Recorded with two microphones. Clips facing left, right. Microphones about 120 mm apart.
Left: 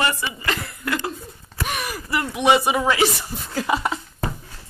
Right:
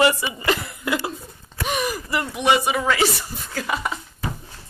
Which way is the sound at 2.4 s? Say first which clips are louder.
Left 2 dB; 25° left (ahead or behind).